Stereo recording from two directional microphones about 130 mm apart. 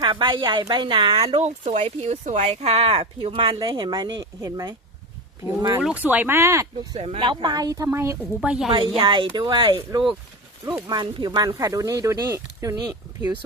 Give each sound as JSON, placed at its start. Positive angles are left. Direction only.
{"t": 0.0, "sound": "speech", "side_deg": -40}
{"t": 1.4, "sound": "speech", "side_deg": -60}
{"t": 5.8, "sound": "speech", "side_deg": -10}
{"t": 7.0, "sound": "speech", "side_deg": -40}
{"t": 8.4, "sound": "a woman's voice", "side_deg": -5}
{"t": 9.0, "sound": "speech", "side_deg": -40}